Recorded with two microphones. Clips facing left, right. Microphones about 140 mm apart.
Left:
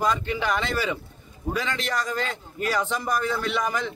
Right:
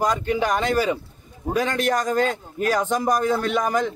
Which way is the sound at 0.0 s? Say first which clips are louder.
Right 3 dB; 45° right (ahead or behind).